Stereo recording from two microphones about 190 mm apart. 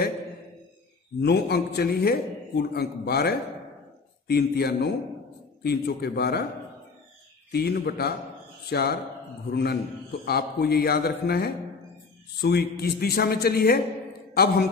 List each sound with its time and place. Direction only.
1.2 s a man's voice: 60° left (ahead or behind)
7.5 s a man's voice: 55° left (ahead or behind)